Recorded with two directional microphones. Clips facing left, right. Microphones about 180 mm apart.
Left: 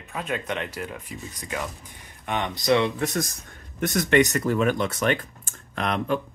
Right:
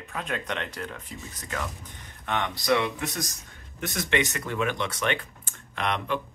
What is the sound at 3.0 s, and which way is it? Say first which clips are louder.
Speech: left 6 dB; 50° left (ahead or behind).